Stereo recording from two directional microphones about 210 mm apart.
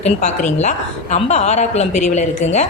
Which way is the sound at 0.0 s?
35° left (ahead or behind).